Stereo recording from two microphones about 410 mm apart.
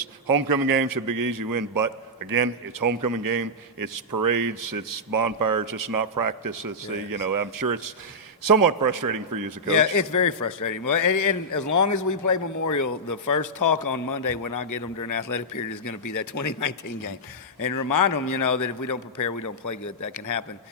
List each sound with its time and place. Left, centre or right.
0.0 s a man's voice: right
9.6 s a man's voice: left